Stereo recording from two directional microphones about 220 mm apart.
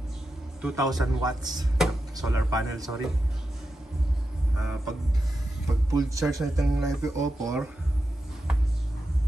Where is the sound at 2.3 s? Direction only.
15° right (ahead or behind).